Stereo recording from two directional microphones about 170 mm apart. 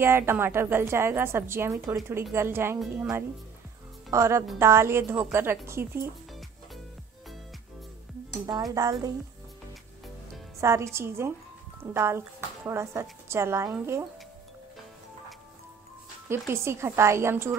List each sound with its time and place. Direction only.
0.0 s a woman's voice: 15° right (ahead or behind)
8.8 s speech: 20° right (ahead or behind)
10.6 s a woman's voice: 15° right (ahead or behind)
16.3 s a woman's voice: 15° right (ahead or behind)